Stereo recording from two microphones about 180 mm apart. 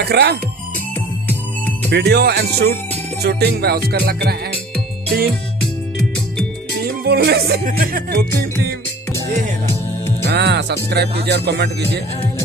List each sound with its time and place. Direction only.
0.0 s speech: 65° right (ahead or behind)
1.9 s speech: 65° right (ahead or behind)
7.1 s speech: 60° right (ahead or behind)
10.2 s speech: 65° right (ahead or behind)